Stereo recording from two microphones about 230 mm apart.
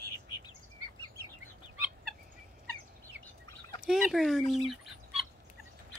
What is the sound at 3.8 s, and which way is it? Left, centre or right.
Fowl, centre.